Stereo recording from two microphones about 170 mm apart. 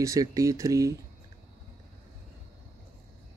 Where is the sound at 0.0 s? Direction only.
20° right (ahead or behind).